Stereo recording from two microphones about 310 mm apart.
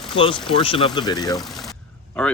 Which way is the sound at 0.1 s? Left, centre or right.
Centre.